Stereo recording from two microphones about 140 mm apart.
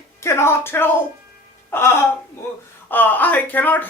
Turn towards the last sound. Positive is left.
turn(degrees=10)  # may be behind; listen again after turning